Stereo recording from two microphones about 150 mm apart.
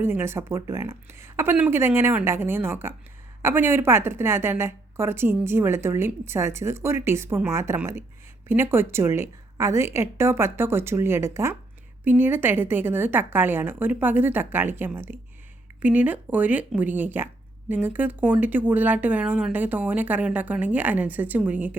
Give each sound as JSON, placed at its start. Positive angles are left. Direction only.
{"t": 0.0, "sound": "a woman's voice", "side_deg": -15}